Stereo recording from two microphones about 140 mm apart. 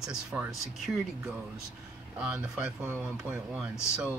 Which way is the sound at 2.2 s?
10° right (ahead or behind).